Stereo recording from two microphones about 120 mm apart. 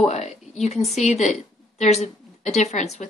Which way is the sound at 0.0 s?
70° left (ahead or behind).